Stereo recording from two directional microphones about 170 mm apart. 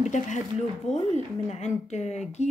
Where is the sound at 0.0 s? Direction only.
45° left (ahead or behind).